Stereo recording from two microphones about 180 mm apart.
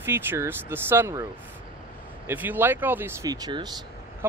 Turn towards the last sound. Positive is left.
turn(degrees=-25)  # may be behind; listen again after turning